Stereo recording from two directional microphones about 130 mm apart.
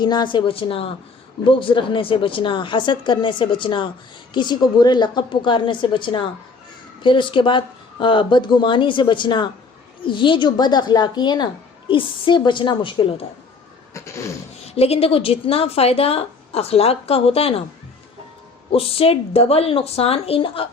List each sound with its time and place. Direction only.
0.0 s a woman's voice: 35° left (ahead or behind)
13.9 s a sound: 25° left (ahead or behind)
14.8 s a woman's voice: 50° left (ahead or behind)
18.7 s a woman's voice: 45° left (ahead or behind)